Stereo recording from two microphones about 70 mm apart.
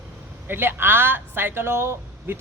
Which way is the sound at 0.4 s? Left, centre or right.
Right.